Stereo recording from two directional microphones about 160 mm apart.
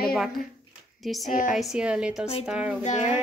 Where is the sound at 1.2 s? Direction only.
55° left (ahead or behind).